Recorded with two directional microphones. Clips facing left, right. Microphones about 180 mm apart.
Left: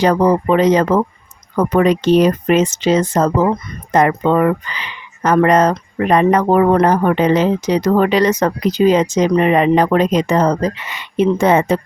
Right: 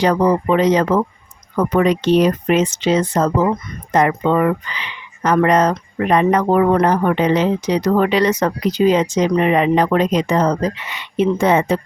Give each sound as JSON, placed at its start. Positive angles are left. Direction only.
{"t": 0.0, "sound": "speech", "side_deg": 45}